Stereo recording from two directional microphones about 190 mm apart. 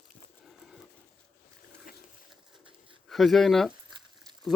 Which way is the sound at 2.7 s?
25° right (ahead or behind).